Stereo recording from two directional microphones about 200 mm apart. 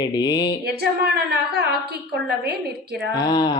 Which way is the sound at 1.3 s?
55° right (ahead or behind).